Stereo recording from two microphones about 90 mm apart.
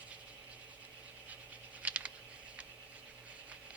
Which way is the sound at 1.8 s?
15° right (ahead or behind).